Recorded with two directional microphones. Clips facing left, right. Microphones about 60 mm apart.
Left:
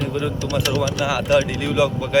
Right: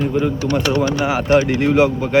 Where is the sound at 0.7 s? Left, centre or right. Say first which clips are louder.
Right 3 dB; right.